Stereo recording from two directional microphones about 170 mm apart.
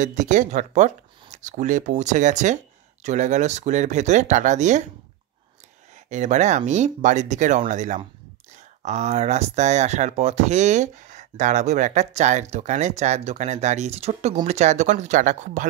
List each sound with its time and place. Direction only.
0.0 s speech: 45° right (ahead or behind)
6.0 s speech: 45° right (ahead or behind)